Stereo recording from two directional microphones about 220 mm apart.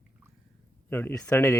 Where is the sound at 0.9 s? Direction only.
10° left (ahead or behind).